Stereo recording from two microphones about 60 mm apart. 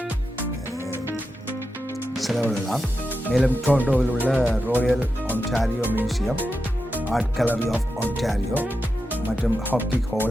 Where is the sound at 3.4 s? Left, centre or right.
Right.